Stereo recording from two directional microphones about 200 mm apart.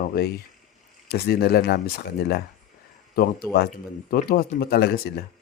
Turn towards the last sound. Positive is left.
turn(degrees=50)  # may be behind; listen again after turning